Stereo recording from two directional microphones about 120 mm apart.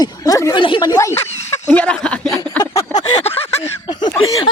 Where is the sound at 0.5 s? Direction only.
40° left (ahead or behind).